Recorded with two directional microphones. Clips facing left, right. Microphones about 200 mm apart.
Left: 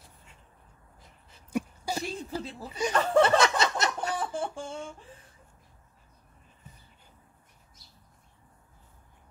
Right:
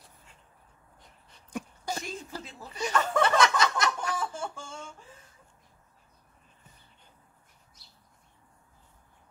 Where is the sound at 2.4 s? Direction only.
35° left (ahead or behind).